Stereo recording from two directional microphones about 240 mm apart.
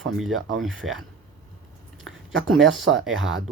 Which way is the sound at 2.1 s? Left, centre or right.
Right.